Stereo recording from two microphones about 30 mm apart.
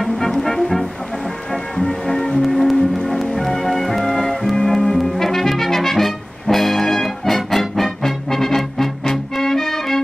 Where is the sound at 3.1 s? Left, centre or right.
Centre.